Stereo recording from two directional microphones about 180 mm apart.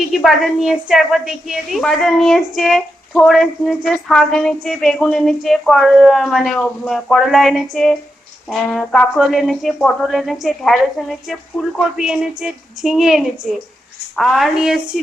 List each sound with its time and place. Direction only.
0.0 s a woman's voice: centre (ahead or behind)